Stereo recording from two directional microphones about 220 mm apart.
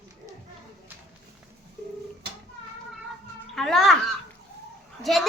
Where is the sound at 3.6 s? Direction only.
Centre (ahead or behind).